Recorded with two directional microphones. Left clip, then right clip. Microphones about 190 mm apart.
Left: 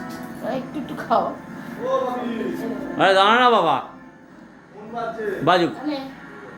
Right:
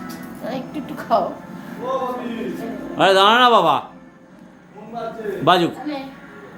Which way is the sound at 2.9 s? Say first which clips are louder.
Right 2 dB; 20° right (ahead or behind).